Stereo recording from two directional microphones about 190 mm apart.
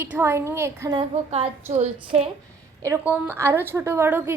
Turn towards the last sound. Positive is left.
turn(degrees=-10)  # may be behind; listen again after turning